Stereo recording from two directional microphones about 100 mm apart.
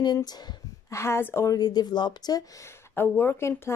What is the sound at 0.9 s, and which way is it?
Speech, 25° left (ahead or behind).